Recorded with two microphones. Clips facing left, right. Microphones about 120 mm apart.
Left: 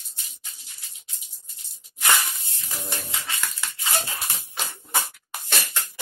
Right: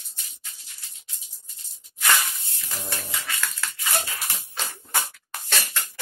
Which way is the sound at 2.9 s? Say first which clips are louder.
Even; 20° left (ahead or behind).